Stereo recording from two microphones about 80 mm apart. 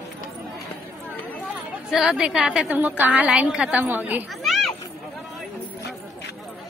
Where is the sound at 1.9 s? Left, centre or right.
Centre.